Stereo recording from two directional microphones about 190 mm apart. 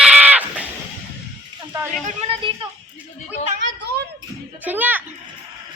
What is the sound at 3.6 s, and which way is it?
Speech, 70° right (ahead or behind).